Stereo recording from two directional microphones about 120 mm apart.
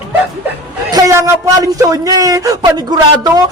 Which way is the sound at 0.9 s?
30° right (ahead or behind).